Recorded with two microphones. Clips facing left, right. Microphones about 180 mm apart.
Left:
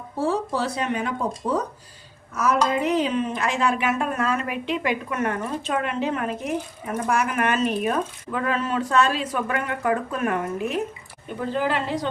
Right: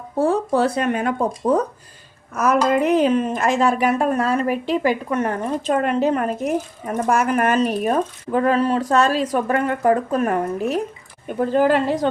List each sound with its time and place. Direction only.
0.2 s a woman's voice: 55° right (ahead or behind)